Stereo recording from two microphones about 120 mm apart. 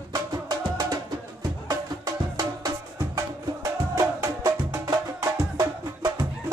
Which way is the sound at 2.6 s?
30° right (ahead or behind).